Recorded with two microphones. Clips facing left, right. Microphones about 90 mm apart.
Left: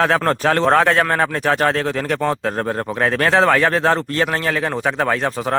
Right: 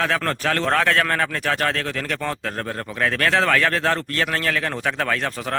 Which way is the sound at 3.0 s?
25° left (ahead or behind).